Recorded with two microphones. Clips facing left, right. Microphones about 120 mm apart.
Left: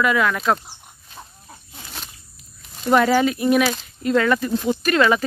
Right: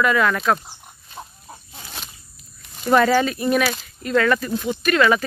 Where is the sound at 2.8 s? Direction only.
10° left (ahead or behind).